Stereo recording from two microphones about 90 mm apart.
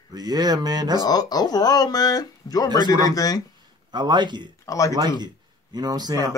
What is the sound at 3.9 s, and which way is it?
Speech, 55° right (ahead or behind).